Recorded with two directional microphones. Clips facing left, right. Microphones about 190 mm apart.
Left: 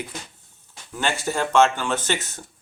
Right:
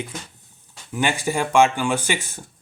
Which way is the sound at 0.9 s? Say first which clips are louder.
Right 2 dB; 15° right (ahead or behind).